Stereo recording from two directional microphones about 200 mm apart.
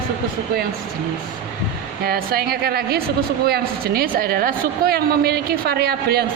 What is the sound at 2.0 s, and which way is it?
A woman's voice, 50° right (ahead or behind).